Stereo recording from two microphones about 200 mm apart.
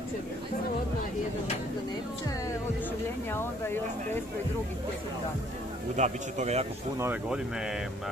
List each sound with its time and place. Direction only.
3.3 s speech: 10° left (ahead or behind)
5.9 s speech: 35° right (ahead or behind)
7.0 s speech: 10° right (ahead or behind)